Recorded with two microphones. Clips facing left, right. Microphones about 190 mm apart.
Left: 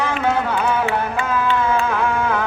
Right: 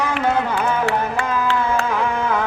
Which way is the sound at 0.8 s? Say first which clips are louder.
Even; 75° right (ahead or behind).